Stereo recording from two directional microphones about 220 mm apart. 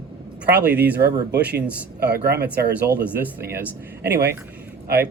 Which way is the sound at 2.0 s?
45° right (ahead or behind).